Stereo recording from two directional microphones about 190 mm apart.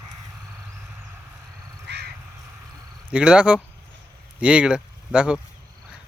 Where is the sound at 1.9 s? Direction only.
65° right (ahead or behind).